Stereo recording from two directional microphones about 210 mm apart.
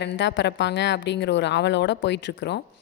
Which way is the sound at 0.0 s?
60° left (ahead or behind).